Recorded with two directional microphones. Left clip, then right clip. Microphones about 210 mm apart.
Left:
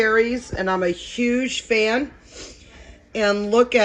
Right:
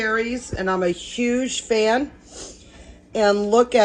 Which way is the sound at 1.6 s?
15° left (ahead or behind).